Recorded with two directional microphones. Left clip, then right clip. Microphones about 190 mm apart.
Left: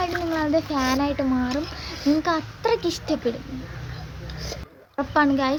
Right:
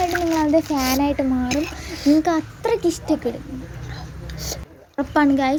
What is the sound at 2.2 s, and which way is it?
Speech, 15° right (ahead or behind).